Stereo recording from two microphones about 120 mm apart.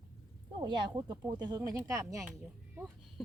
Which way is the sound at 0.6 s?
35° right (ahead or behind).